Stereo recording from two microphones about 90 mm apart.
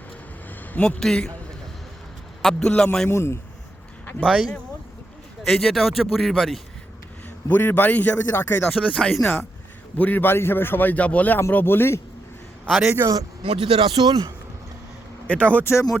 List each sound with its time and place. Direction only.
0.9 s speech: 5° left (ahead or behind)
2.4 s speech: 5° left (ahead or behind)
3.1 s a man's voice: 30° left (ahead or behind)
4.2 s speech: 10° right (ahead or behind)
5.4 s speech: 5° left (ahead or behind)
7.4 s a man's voice: 20° left (ahead or behind); by 9.3 s 5° left (ahead or behind)
10.0 s a man's voice: 20° left (ahead or behind)
12.6 s a man's voice: centre (ahead or behind)
13.4 s speech: 85° right
13.9 s speech: 50° right (ahead or behind)
15.3 s speech: 15° left (ahead or behind)
15.6 s speech: 30° left (ahead or behind)